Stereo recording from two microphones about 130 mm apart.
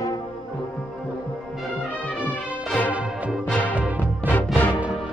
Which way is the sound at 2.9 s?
10° right (ahead or behind).